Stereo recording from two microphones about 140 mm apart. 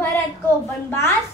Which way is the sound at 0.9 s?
15° left (ahead or behind).